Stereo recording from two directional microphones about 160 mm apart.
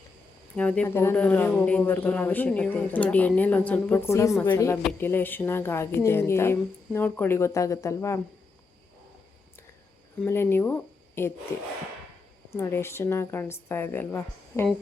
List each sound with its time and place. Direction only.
0.5 s speech: 10° left (ahead or behind)
10.2 s speech: 15° left (ahead or behind)
12.5 s speech: 15° left (ahead or behind)